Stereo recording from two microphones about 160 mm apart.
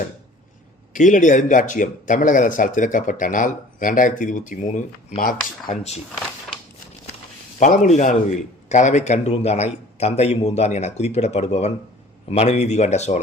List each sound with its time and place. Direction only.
0.9 s a man's voice: 50° left (ahead or behind)
5.1 s speech: 65° left (ahead or behind)
7.6 s a man's voice: 55° left (ahead or behind)